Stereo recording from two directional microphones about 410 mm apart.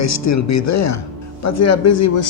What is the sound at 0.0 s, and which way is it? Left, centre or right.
Speech, left.